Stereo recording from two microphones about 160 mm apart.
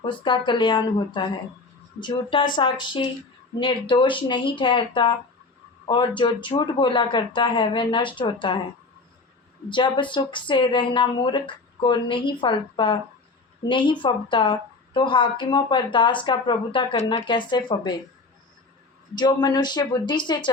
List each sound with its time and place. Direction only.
0.0 s speech: 30° left (ahead or behind)
9.6 s speech: 30° left (ahead or behind)
19.1 s speech: 25° left (ahead or behind)